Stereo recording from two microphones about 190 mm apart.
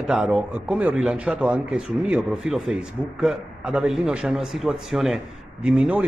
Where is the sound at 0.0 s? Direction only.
Centre (ahead or behind).